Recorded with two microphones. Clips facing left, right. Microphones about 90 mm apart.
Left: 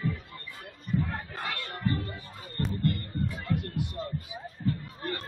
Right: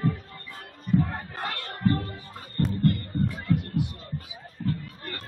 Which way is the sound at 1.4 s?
45° right (ahead or behind).